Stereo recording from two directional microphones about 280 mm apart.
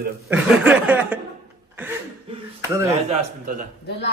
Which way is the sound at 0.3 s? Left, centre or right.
Centre.